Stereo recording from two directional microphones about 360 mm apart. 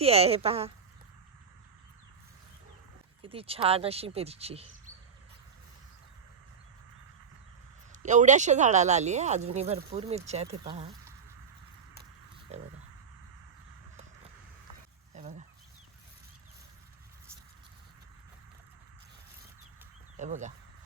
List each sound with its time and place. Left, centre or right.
0.0 s speech: centre
3.2 s speech: centre
7.9 s speech: centre
15.1 s a sound: centre
20.1 s speech: centre